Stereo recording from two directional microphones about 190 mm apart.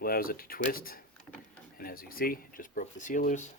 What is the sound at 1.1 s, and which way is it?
Vehicle, 5° left (ahead or behind).